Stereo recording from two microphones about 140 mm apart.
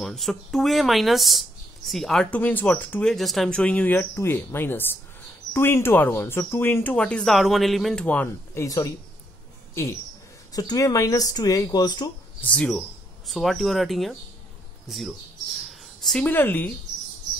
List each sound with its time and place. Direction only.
0.0 s speech: centre (ahead or behind)
10.5 s speech: 25° left (ahead or behind)
12.4 s speech: 10° left (ahead or behind)
15.7 s a sound: centre (ahead or behind)
16.3 s speech: 15° left (ahead or behind)